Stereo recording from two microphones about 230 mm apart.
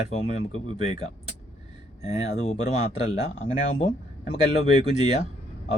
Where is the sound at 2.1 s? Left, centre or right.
Left.